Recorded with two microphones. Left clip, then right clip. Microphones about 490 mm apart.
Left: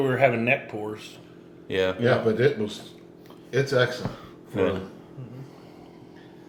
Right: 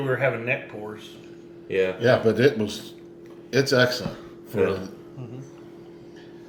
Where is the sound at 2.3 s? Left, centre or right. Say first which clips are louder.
Right 2 dB; right.